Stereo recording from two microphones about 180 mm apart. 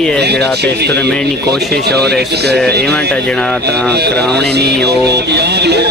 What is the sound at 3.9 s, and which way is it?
Speech, 65° right (ahead or behind).